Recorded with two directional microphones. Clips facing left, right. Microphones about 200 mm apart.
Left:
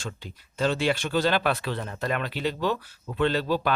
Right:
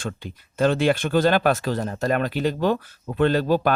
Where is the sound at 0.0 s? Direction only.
55° right (ahead or behind).